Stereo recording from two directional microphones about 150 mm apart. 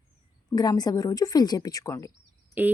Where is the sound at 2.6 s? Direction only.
10° right (ahead or behind).